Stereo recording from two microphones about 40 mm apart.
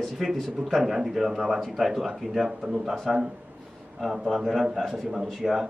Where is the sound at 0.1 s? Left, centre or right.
Centre.